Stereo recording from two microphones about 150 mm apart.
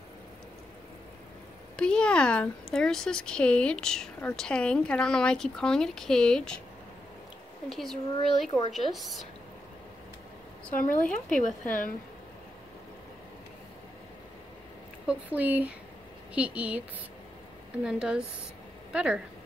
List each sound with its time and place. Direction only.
1.8 s speech: 5° left (ahead or behind)
7.7 s speech: centre (ahead or behind)
10.7 s speech: 65° left (ahead or behind)
11.0 s speech: 5° left (ahead or behind)
15.0 s speech: 10° right (ahead or behind)
17.8 s speech: 5° right (ahead or behind)